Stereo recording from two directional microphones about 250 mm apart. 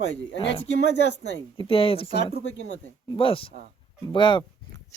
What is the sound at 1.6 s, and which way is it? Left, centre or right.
Speech, left.